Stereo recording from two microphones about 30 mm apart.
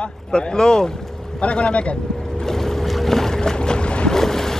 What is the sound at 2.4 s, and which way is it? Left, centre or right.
Boat, centre.